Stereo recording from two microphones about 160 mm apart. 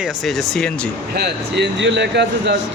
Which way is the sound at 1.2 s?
90° right.